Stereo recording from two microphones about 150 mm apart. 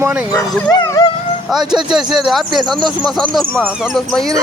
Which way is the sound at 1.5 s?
5° right (ahead or behind).